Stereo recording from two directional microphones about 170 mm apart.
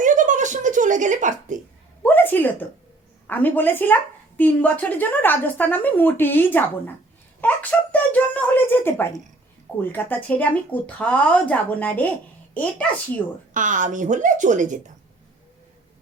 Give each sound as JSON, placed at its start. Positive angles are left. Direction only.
{"t": 0.0, "sound": "a sound", "side_deg": -50}
{"t": 2.0, "sound": "a woman's voice", "side_deg": 10}
{"t": 13.5, "sound": "a woman's voice", "side_deg": -50}